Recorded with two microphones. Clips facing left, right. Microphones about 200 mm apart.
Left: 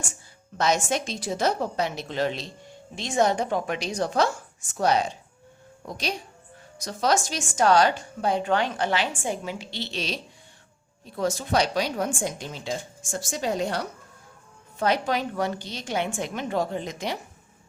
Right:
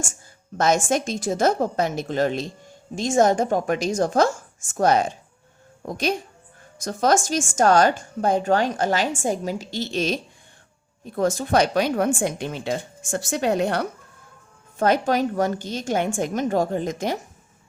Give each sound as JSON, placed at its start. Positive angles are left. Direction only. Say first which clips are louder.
{"t": 0.0, "sound": "a woman's voice", "louder": "right 6 dB", "side_deg": -45}
{"t": 14.8, "sound": "speech", "louder": "right 5 dB", "side_deg": -50}